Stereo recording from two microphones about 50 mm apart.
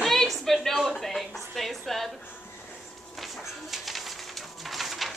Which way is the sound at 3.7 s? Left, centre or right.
Centre.